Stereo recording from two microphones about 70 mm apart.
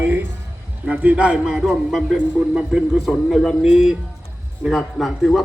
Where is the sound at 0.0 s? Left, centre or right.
Right.